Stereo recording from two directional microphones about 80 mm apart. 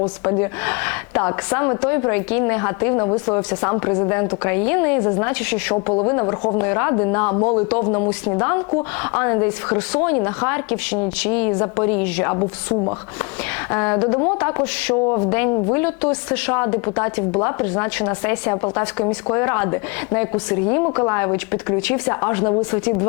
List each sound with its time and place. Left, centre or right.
0.3 s speech: left